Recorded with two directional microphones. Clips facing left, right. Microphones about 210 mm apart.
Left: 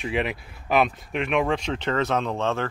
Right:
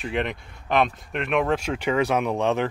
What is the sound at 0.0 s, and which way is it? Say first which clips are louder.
Speech: left 1 dB; 5° left (ahead or behind).